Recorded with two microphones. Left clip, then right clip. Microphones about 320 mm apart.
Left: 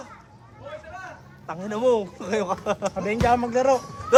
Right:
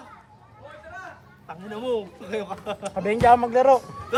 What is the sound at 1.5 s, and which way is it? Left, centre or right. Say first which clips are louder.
Speech: left 6 dB; centre.